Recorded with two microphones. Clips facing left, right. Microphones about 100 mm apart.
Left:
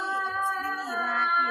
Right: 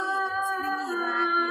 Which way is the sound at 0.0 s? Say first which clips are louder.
Right 1 dB; 5° right (ahead or behind).